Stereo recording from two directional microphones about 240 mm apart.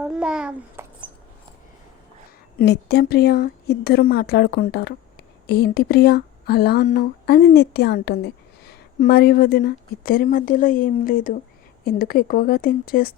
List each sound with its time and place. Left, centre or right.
0.0 s a child's voice: centre
2.6 s speech: left